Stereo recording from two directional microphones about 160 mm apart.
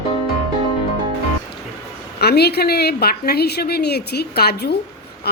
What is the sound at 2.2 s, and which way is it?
A woman's voice, 90° left.